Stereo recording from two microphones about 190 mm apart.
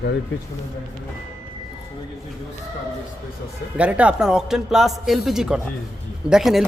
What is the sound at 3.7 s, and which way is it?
Speech, 5° right (ahead or behind).